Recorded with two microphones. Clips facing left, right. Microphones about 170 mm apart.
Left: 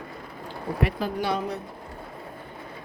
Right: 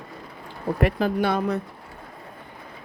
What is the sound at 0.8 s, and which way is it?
Speech, 55° right (ahead or behind).